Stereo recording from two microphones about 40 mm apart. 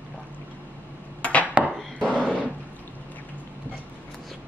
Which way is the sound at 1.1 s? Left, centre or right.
Left.